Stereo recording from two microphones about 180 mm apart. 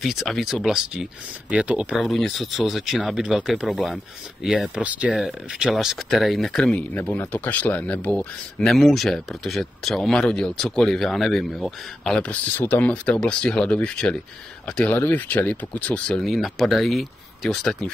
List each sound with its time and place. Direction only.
0.0 s speech: centre (ahead or behind)